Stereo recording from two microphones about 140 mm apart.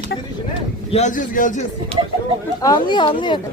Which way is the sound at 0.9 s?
60° left (ahead or behind).